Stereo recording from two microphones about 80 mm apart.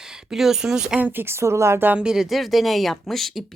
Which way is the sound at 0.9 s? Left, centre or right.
Right.